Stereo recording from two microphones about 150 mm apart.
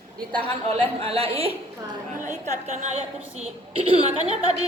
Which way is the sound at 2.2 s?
50° right (ahead or behind).